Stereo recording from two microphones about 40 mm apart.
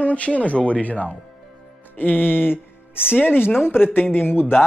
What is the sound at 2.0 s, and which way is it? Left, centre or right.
Music, left.